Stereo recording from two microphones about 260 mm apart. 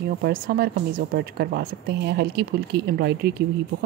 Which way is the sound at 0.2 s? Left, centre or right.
Right.